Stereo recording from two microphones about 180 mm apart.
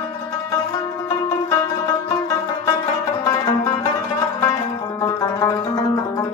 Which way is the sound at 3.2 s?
20° left (ahead or behind).